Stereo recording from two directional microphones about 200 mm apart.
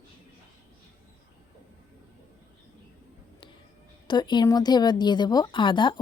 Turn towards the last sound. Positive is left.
turn(degrees=25)  # may be behind; listen again after turning